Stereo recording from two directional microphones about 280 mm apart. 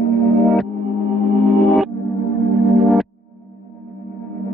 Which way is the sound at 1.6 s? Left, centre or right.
Centre.